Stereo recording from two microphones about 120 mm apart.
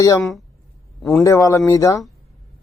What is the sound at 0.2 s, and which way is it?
Speech, centre (ahead or behind).